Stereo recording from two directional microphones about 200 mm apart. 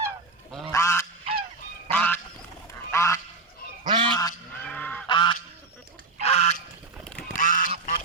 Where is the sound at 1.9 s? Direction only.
10° left (ahead or behind).